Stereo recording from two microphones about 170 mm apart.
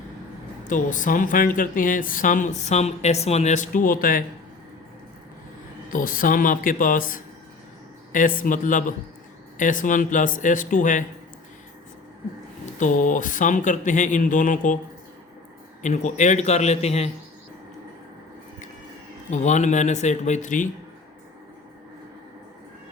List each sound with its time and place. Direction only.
0.7 s speech: 50° left (ahead or behind)
5.9 s speech: 55° left (ahead or behind)
12.8 s speech: 50° left (ahead or behind)
15.8 s a man's voice: 45° left (ahead or behind)
19.3 s speech: 45° left (ahead or behind)